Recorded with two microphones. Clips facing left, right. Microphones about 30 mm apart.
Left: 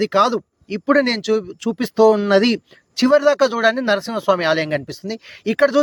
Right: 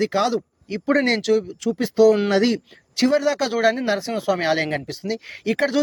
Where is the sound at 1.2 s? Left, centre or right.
Centre.